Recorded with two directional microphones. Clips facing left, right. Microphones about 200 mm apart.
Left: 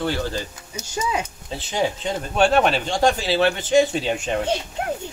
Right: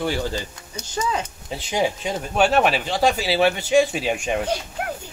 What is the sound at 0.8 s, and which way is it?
Speech, 10° left (ahead or behind).